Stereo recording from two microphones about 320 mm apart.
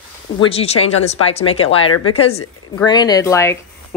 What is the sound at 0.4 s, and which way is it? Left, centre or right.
Speech, centre.